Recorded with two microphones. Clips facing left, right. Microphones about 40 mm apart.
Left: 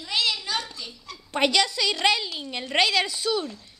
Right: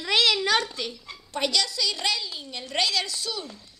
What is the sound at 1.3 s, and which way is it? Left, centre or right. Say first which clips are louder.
A woman's voice: left 4 dB; left.